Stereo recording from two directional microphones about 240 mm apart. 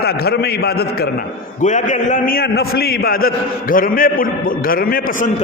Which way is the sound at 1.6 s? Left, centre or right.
Left.